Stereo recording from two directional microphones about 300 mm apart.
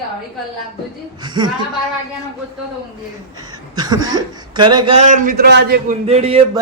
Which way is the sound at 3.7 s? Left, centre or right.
Centre.